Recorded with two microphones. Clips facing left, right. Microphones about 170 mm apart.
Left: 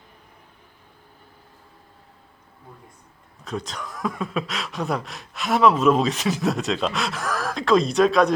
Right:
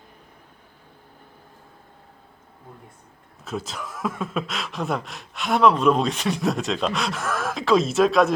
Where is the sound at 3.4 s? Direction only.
5° right (ahead or behind).